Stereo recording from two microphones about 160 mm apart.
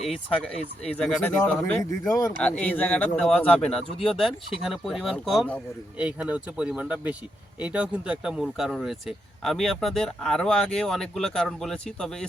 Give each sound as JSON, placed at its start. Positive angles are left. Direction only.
{"t": 0.9, "sound": "speech", "side_deg": 5}
{"t": 2.0, "sound": "speech", "side_deg": 20}
{"t": 2.4, "sound": "speech", "side_deg": 10}